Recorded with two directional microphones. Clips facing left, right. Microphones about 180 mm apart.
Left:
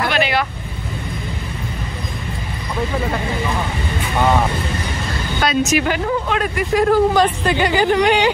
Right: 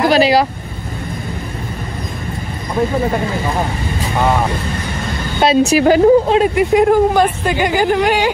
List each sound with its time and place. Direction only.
0.0 s vehicle: 35° right (ahead or behind)
5.4 s speech: 30° right (ahead or behind); by 8.3 s 5° right (ahead or behind)